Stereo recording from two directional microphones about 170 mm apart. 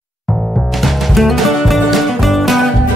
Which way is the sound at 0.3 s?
Centre (ahead or behind).